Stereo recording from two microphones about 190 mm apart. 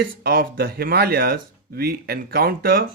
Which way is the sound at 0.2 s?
55° right (ahead or behind).